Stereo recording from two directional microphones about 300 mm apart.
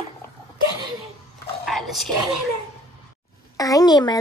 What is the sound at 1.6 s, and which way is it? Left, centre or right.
Speech, centre.